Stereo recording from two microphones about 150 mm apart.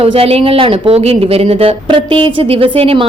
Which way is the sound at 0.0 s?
40° right (ahead or behind).